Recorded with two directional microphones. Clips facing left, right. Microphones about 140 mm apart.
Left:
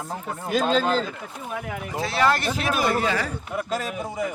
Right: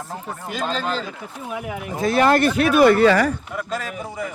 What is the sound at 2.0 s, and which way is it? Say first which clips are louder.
Speech: right 6 dB; 50° right (ahead or behind).